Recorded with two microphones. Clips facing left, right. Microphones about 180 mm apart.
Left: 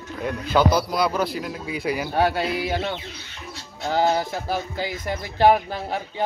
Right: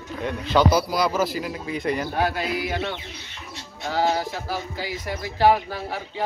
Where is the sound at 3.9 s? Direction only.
25° left (ahead or behind).